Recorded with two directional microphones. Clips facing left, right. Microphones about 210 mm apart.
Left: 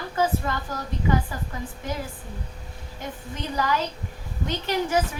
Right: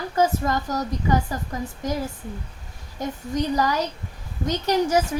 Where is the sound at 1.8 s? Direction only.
40° right (ahead or behind).